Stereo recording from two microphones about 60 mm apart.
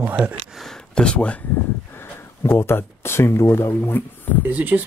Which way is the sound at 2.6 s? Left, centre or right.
Left.